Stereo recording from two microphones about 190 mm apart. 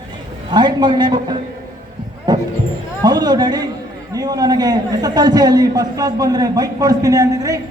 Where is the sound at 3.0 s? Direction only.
20° right (ahead or behind).